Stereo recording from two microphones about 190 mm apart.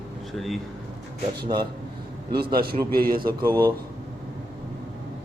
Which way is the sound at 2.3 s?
55° right (ahead or behind).